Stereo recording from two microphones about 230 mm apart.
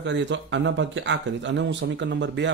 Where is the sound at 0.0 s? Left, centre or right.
Right.